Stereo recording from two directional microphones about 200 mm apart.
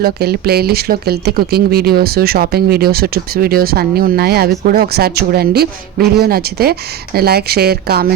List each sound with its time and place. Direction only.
0.0 s speech: 50° right (ahead or behind)